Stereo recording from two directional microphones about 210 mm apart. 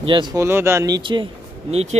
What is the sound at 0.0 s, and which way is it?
Speech, 20° right (ahead or behind).